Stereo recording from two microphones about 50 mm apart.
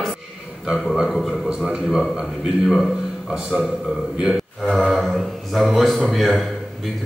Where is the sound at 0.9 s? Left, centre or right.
Centre.